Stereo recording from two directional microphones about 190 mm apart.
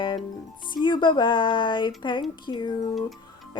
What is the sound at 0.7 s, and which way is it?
Speech, 25° left (ahead or behind).